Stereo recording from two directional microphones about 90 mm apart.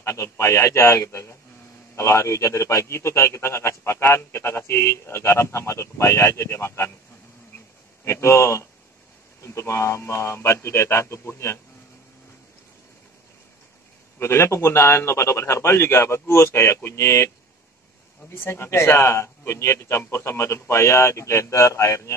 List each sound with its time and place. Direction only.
0.0 s a man's voice: 30° left (ahead or behind)
8.0 s a man's voice: 30° left (ahead or behind)
14.1 s a man's voice: 30° left (ahead or behind)
18.3 s a man's voice: 25° left (ahead or behind)